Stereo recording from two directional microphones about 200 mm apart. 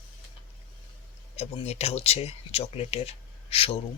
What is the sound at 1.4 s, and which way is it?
Speech, 30° left (ahead or behind).